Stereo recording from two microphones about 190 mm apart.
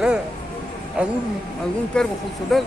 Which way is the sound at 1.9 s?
5° left (ahead or behind).